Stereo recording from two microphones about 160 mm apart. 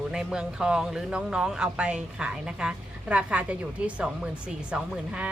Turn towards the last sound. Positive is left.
turn(degrees=-5)  # may be behind; listen again after turning